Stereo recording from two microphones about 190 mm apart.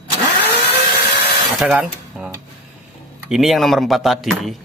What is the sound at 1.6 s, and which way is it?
Speech, 5° right (ahead or behind).